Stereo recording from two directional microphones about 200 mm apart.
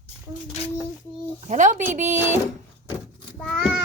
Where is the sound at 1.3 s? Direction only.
35° right (ahead or behind).